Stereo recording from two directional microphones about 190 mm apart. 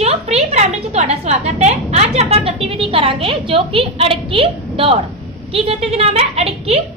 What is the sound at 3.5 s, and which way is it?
A woman's voice, 30° right (ahead or behind).